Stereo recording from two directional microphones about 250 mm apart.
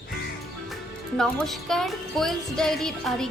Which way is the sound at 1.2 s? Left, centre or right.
Centre.